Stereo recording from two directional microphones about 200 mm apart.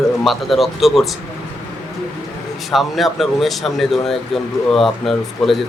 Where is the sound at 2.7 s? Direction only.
Centre (ahead or behind).